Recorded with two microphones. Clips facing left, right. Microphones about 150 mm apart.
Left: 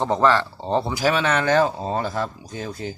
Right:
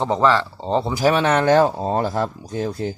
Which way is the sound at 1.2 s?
35° right (ahead or behind).